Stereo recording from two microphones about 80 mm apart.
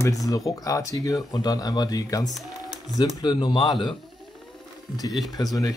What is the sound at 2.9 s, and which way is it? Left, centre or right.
Speech, left.